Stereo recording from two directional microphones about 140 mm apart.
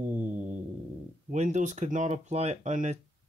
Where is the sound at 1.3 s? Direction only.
60° right (ahead or behind).